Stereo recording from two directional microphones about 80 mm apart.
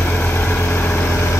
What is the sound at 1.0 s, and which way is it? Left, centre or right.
Vehicle, left.